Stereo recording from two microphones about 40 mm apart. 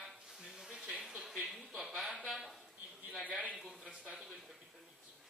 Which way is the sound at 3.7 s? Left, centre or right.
Right.